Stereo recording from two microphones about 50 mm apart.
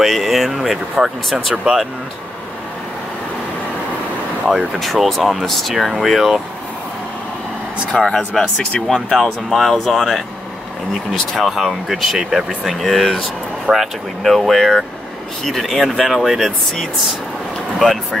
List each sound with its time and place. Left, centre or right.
0.0 s speech: centre
5.0 s speech: centre
7.9 s speech: centre
11.3 s speech: centre
13.7 s speech: right
14.2 s speech: centre